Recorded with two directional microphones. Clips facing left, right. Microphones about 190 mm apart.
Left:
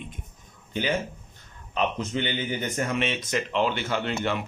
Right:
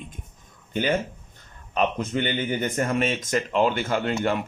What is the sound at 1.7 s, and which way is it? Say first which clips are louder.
Speech: right 3 dB; 50° right (ahead or behind).